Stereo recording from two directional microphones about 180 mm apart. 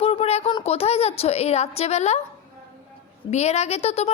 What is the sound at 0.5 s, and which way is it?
A woman's voice, 35° left (ahead or behind).